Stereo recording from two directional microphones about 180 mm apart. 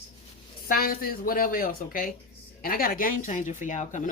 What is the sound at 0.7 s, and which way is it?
Speech, 55° left (ahead or behind).